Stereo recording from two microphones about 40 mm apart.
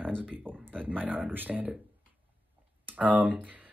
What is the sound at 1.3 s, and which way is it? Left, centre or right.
Speech, right.